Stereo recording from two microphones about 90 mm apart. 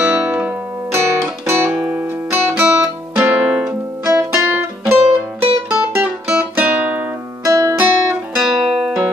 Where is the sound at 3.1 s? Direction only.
10° right (ahead or behind).